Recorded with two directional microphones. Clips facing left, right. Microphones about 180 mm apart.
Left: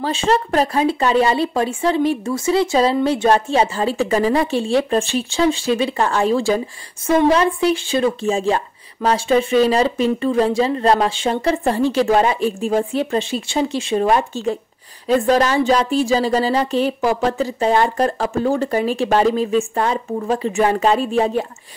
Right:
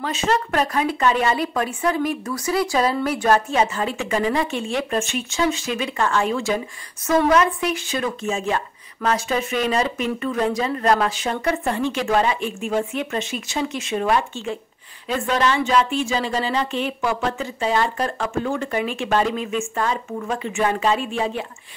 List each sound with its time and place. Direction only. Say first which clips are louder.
0.0 s speech: left 4 dB; 30° left (ahead or behind)